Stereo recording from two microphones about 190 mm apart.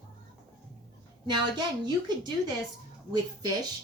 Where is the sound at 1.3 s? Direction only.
20° right (ahead or behind).